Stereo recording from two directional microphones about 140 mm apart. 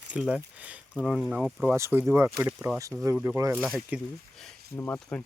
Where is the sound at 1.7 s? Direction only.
20° right (ahead or behind).